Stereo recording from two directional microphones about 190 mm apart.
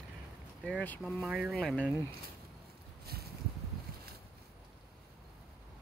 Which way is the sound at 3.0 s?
55° right (ahead or behind).